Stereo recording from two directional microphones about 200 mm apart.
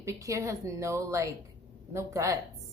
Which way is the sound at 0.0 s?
15° right (ahead or behind).